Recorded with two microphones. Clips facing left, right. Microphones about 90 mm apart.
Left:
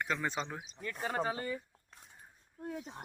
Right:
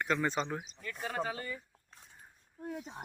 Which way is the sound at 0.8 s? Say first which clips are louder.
Left 4 dB; 30° left (ahead or behind).